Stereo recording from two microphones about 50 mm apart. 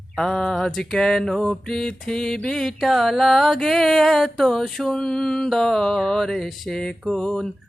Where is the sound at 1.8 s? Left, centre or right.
Centre.